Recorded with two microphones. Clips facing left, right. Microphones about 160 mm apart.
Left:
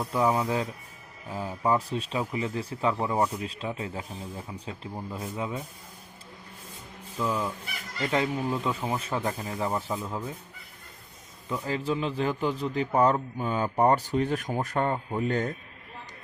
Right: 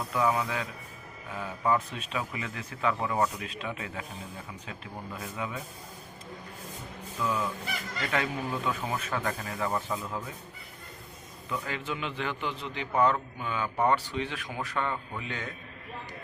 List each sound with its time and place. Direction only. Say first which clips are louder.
0.1 s a man's voice: left 3 dB; 30° left (ahead or behind)
7.2 s a man's voice: left 2 dB; 30° left (ahead or behind)
11.4 s a man's voice: left 5 dB; 30° left (ahead or behind)